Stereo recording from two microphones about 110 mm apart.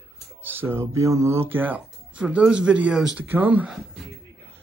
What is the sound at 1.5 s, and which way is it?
Speech, 15° right (ahead or behind).